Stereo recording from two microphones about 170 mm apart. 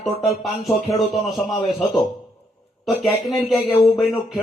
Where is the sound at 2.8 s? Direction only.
Centre (ahead or behind).